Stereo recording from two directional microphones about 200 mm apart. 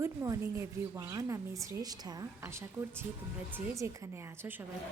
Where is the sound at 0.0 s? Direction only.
15° right (ahead or behind).